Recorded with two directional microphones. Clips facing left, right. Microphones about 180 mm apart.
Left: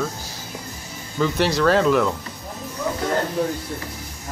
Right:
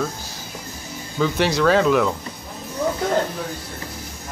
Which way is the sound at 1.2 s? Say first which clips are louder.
Even; centre (ahead or behind).